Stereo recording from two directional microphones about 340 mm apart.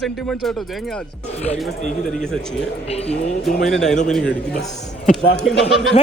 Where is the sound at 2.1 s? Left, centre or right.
Centre.